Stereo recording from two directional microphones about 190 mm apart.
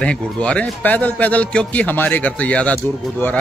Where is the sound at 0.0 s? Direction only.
5° left (ahead or behind).